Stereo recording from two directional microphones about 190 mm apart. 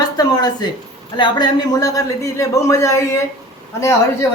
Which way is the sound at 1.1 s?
25° left (ahead or behind).